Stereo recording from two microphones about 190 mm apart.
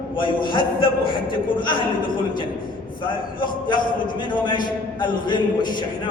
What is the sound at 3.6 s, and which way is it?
A man's voice, 25° left (ahead or behind).